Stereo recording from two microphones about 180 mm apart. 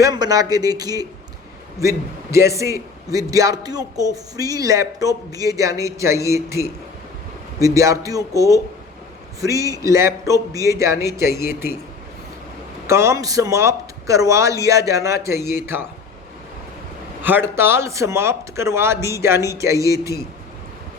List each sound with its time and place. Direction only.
0.0 s speech: 20° right (ahead or behind)
12.9 s speech: 15° right (ahead or behind)
17.2 s speech: 10° right (ahead or behind)